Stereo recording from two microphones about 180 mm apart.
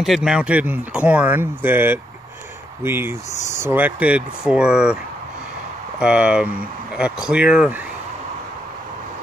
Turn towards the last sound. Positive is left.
turn(degrees=-5)  # may be behind; listen again after turning